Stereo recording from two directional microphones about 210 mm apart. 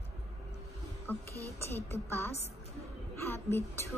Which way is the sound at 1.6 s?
10° left (ahead or behind).